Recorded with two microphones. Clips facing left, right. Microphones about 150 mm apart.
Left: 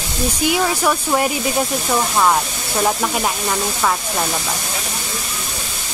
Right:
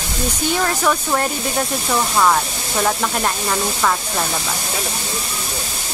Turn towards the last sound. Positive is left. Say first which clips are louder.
# even
turn(degrees=5)  # may be behind; listen again after turning